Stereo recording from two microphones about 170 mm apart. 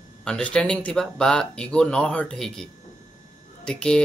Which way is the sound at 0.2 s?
5° left (ahead or behind).